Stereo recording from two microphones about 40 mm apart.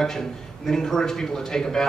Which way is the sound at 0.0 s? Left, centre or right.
Centre.